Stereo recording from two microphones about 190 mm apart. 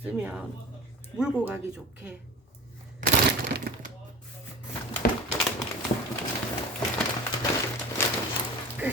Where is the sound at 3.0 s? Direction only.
60° right (ahead or behind).